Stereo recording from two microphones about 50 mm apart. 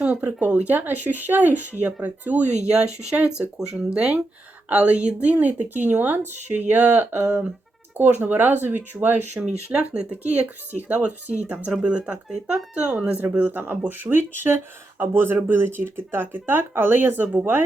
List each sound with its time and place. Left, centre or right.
0.0 s a sound: right
0.3 s speech: right
2.6 s speech: centre; by 9.4 s right
9.4 s speech: centre
10.1 s speech: right
11.8 s speech: right
13.3 s speech: right